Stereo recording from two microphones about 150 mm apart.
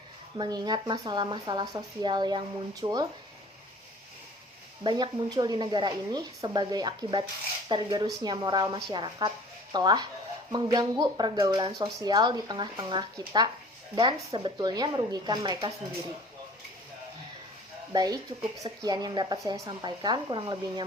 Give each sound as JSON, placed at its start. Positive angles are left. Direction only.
{"t": 0.3, "sound": "a woman's voice", "side_deg": -30}
{"t": 4.8, "sound": "a woman's voice", "side_deg": -30}
{"t": 17.9, "sound": "a woman's voice", "side_deg": -25}